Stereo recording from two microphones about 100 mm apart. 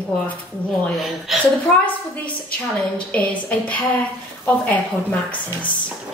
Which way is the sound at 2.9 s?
15° left (ahead or behind).